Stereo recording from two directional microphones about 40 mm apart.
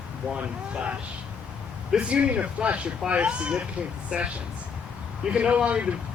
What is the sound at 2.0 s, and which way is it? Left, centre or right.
Speech, right.